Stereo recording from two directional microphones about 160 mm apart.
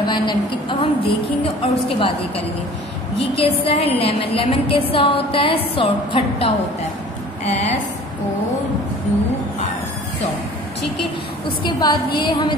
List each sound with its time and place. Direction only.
0.0 s a woman's voice: 30° left (ahead or behind)
7.4 s a woman's voice: 45° left (ahead or behind)
11.6 s a woman's voice: 30° left (ahead or behind)